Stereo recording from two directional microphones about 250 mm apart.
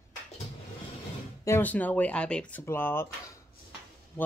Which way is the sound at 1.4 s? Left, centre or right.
Centre.